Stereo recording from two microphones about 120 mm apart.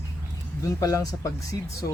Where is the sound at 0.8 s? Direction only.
30° left (ahead or behind).